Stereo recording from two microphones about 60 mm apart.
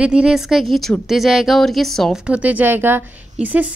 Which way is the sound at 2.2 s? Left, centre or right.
Right.